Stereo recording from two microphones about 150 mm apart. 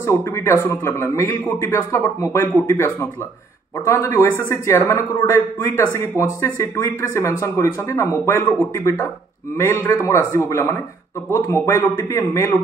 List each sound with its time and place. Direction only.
0.0 s speech: 20° left (ahead or behind)